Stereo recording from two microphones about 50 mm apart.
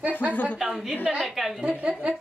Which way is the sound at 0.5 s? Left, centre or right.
Centre.